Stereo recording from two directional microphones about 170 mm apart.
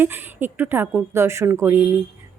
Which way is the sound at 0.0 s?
10° right (ahead or behind).